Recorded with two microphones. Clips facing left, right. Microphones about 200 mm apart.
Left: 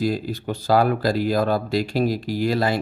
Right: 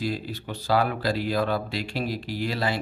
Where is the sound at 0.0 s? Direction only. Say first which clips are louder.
Left 6 dB; 45° left (ahead or behind).